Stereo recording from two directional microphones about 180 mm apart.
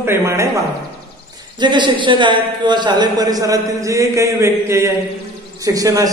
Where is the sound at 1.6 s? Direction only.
25° right (ahead or behind).